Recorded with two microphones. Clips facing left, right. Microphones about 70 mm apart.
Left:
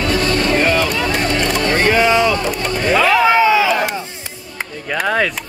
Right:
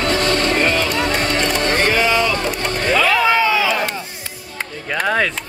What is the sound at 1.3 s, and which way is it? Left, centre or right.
Boat, left.